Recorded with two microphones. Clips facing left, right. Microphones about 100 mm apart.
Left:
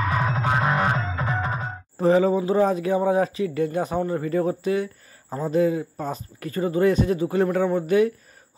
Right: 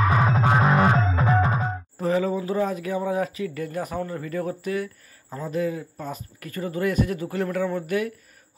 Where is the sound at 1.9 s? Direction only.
30° left (ahead or behind).